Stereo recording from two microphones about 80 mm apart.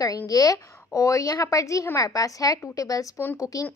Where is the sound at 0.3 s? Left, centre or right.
Left.